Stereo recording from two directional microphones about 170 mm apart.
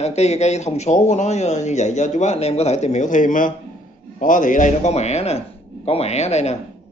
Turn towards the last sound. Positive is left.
turn(degrees=40)  # may be behind; listen again after turning